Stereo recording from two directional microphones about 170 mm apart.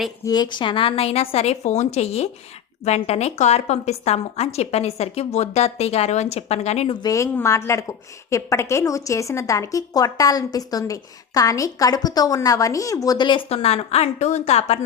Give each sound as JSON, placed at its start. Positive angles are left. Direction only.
{"t": 0.3, "sound": "a woman's voice", "side_deg": 25}
{"t": 7.0, "sound": "a woman's voice", "side_deg": 20}